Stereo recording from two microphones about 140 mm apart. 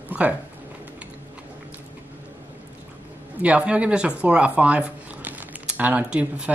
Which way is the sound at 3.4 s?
10° right (ahead or behind).